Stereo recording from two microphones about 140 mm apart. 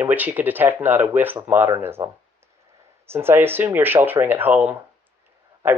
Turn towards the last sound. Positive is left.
turn(degrees=-15)  # may be behind; listen again after turning